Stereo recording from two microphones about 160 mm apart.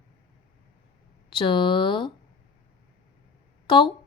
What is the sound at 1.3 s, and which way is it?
Speech, 30° left (ahead or behind).